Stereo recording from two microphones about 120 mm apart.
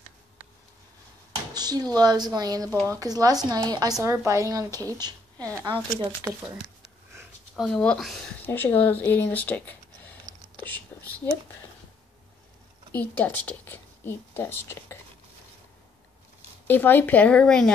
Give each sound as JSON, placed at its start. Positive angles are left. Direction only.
{"t": 1.5, "sound": "speech", "side_deg": -35}
{"t": 4.0, "sound": "a woman's voice", "side_deg": -20}
{"t": 7.5, "sound": "speech", "side_deg": 5}
{"t": 10.5, "sound": "whispering", "side_deg": 15}
{"t": 12.9, "sound": "a woman's voice", "side_deg": 15}
{"t": 16.6, "sound": "speech", "side_deg": 15}